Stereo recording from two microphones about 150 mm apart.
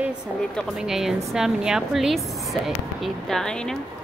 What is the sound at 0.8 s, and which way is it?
A woman's voice, centre (ahead or behind).